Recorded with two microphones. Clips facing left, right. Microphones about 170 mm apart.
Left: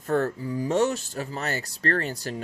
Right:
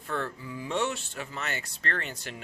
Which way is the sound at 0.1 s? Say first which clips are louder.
Left 9 dB; 45° left (ahead or behind).